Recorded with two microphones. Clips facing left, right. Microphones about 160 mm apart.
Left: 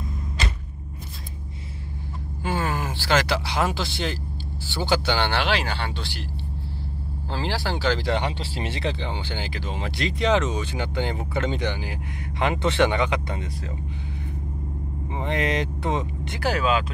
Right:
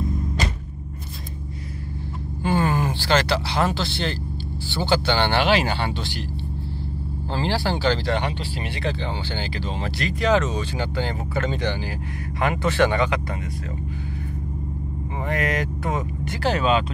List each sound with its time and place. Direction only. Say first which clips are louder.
2.4 s speech: right 5 dB; 5° left (ahead or behind)
7.3 s speech: right 4 dB; centre (ahead or behind)
8.0 s speech: right 1 dB; 20° left (ahead or behind)
9.9 s speech: right 1 dB; 20° left (ahead or behind)
15.2 s speech: even; 25° left (ahead or behind)
16.4 s speech: right 2 dB; 5° left (ahead or behind)